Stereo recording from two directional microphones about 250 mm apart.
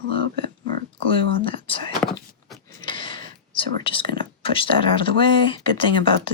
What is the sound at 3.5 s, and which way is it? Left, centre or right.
Speech, left.